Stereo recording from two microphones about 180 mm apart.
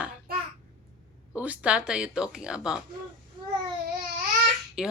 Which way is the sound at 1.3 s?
5° right (ahead or behind).